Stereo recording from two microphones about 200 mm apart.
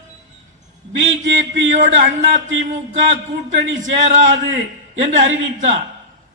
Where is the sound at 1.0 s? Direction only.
40° right (ahead or behind).